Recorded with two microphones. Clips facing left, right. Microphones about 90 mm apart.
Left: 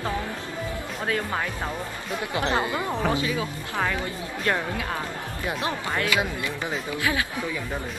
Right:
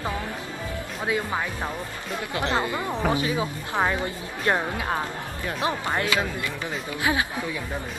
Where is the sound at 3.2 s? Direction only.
25° right (ahead or behind).